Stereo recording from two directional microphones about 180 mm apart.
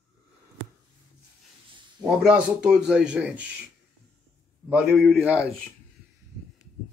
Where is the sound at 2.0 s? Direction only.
5° right (ahead or behind).